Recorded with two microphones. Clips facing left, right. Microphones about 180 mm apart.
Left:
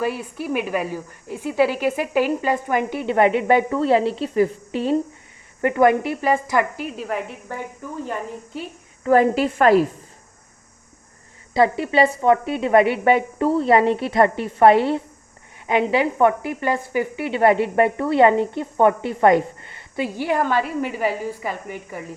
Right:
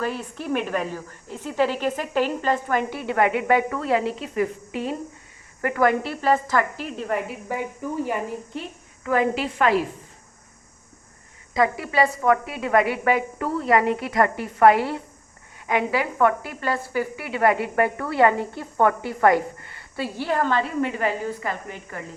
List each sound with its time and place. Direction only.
0.0 s a woman's voice: 10° left (ahead or behind)
9.0 s a woman's voice: 40° left (ahead or behind)
11.5 s speech: 30° left (ahead or behind); by 22.0 s 10° left (ahead or behind)